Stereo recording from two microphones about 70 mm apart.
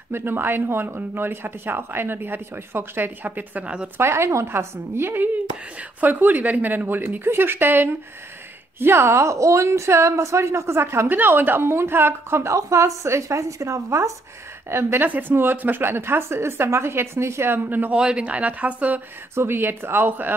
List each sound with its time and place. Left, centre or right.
0.1 s a woman's voice: right
4.0 s a woman's voice: right
14.7 s a woman's voice: right
17.9 s speech: centre
19.3 s a woman's voice: right